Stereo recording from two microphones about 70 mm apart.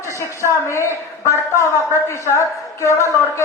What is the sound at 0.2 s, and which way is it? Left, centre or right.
A man's voice, left.